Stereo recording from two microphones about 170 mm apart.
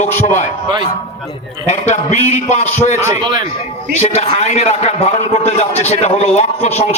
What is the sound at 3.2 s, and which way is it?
Speech, 25° right (ahead or behind).